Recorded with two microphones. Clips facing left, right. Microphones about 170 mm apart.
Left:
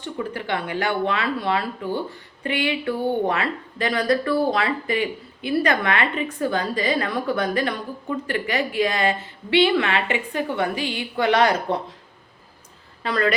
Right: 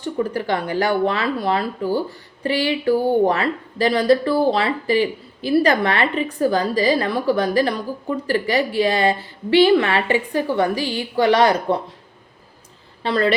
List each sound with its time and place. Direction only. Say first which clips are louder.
0.0 s a woman's voice: right 6 dB; 40° right (ahead or behind)
13.0 s speech: right 3 dB; 30° right (ahead or behind)